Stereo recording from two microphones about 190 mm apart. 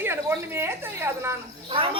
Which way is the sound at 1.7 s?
30° right (ahead or behind).